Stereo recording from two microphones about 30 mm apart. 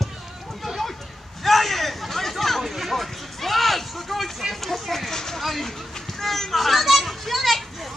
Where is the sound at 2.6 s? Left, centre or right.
Centre.